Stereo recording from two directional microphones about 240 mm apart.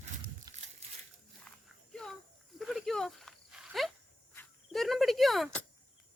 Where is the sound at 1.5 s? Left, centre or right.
Centre.